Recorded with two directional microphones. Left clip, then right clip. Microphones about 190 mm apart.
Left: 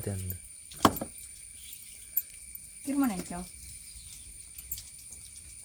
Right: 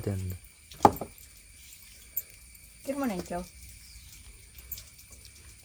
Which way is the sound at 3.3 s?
30° right (ahead or behind).